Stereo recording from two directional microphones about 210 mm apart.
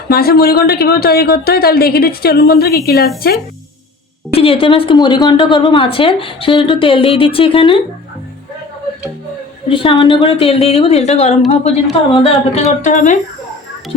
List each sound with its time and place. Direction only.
0.1 s speech: 45° left (ahead or behind)
4.3 s a woman's voice: 25° left (ahead or behind)
9.6 s a woman's voice: 25° left (ahead or behind)